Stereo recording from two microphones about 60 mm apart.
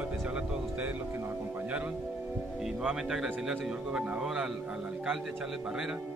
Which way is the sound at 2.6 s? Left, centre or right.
Centre.